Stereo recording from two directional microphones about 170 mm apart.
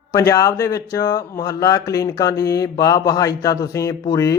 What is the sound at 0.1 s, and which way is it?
Speech, 20° left (ahead or behind).